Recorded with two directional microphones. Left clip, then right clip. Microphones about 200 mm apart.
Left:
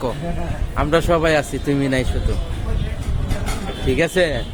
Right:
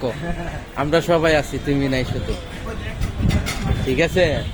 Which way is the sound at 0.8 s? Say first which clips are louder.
Even; 10° left (ahead or behind).